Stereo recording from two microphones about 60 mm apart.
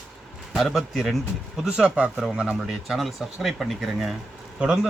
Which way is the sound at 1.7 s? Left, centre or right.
Centre.